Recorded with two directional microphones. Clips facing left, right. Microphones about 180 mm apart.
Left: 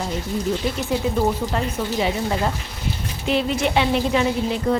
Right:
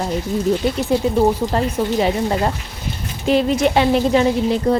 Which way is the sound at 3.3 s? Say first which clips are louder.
Right 5 dB; 40° right (ahead or behind).